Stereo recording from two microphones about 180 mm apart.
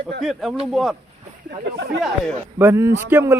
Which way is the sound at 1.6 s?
70° right (ahead or behind).